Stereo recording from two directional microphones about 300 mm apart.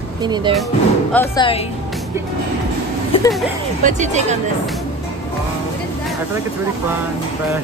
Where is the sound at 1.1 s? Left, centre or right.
Centre.